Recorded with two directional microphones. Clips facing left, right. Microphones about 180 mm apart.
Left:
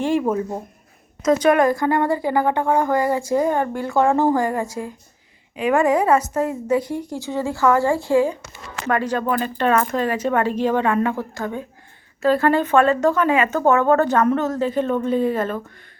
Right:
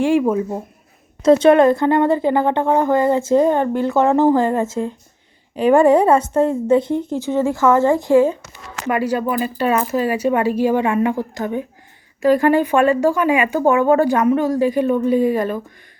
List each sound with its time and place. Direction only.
0.0 s speech: 10° right (ahead or behind)
1.2 s a woman's voice: 25° right (ahead or behind)